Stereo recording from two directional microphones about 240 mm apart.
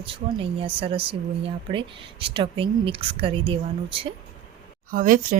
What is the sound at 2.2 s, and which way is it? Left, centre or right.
A woman's voice, right.